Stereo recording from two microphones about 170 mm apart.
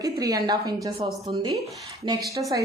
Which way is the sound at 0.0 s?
20° right (ahead or behind).